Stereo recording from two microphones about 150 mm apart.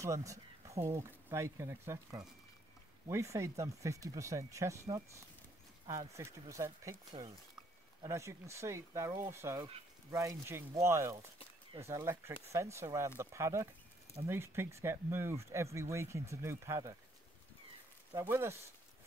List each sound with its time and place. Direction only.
0.0 s a sound: 20° right (ahead or behind)
0.8 s speech: 20° right (ahead or behind)
18.1 s speech: 15° right (ahead or behind)